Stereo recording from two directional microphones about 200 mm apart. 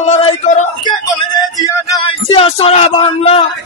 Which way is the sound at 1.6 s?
25° left (ahead or behind).